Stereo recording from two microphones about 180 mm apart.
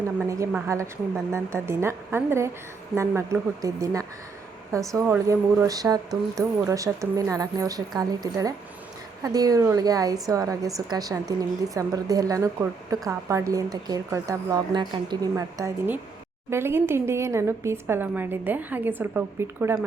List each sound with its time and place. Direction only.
0.2 s a woman's voice: 15° right (ahead or behind)